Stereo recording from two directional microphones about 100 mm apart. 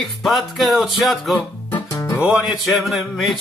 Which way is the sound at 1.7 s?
30° left (ahead or behind).